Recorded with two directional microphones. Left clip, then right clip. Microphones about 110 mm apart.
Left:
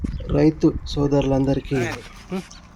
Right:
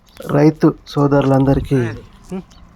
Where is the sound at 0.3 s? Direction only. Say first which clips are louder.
Right 5 dB; 40° right (ahead or behind).